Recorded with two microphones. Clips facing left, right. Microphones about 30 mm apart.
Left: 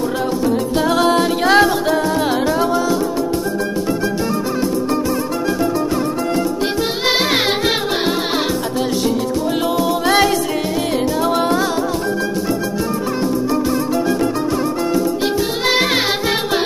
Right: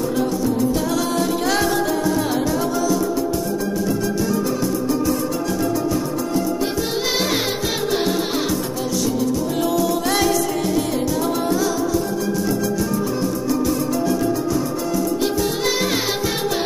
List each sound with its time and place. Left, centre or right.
0.7 s music: left
6.3 s music: left
9.8 s music: left
11.4 s music: left
13.2 s music: left
15.2 s music: left